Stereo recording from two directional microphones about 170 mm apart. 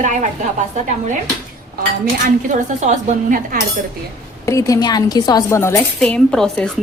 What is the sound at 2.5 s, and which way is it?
Speech, 45° right (ahead or behind).